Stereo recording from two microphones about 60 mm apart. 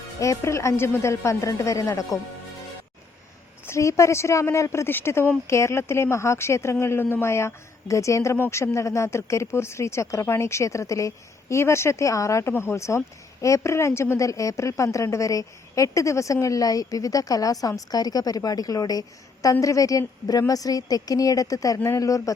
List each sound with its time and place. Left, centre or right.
0.2 s a woman's voice: left
3.7 s a woman's voice: left
4.9 s speech: left
5.5 s a woman's voice: left
20.5 s speech: left
21.9 s a woman's voice: left